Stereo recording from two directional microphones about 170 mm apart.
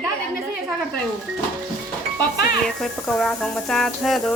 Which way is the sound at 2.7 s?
Centre (ahead or behind).